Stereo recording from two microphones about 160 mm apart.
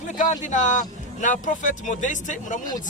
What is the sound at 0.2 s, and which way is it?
Speech, 50° left (ahead or behind).